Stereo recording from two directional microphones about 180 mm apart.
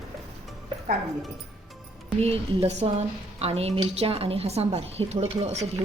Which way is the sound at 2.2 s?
35° right (ahead or behind).